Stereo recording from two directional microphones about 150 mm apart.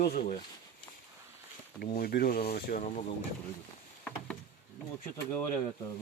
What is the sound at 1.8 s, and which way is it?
Speech, 85° left.